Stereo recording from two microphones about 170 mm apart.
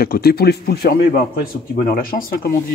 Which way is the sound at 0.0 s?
65° left (ahead or behind).